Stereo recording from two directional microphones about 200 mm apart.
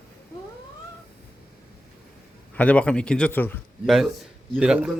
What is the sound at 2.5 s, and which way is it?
A man's voice, 5° left (ahead or behind).